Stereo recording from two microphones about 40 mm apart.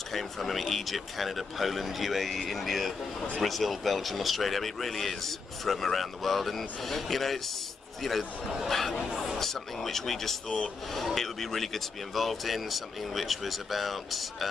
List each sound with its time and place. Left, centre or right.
0.1 s a man's voice: centre
9.1 s speech: centre
9.4 s a man's voice: centre